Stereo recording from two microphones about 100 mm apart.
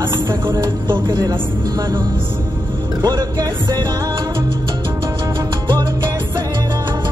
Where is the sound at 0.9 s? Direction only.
55° right (ahead or behind).